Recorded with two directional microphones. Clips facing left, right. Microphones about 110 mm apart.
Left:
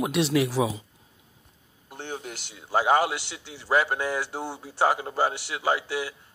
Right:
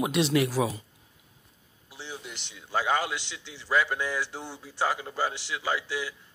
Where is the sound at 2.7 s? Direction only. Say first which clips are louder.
Left 5 dB; 25° left (ahead or behind).